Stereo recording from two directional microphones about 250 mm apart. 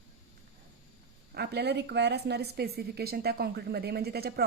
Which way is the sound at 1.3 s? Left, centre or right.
Right.